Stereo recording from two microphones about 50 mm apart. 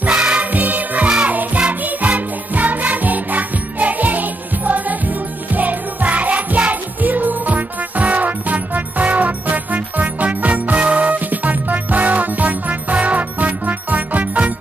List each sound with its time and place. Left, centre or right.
0.0 s music: right
0.5 s music: right